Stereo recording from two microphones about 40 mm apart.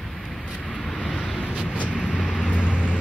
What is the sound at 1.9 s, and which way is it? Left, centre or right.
Vehicle, left.